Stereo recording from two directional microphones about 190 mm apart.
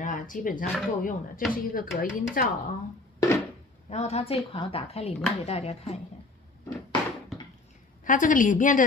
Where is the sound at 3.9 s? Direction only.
35° left (ahead or behind).